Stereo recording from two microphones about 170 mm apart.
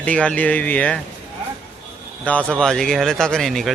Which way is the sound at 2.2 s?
5° left (ahead or behind).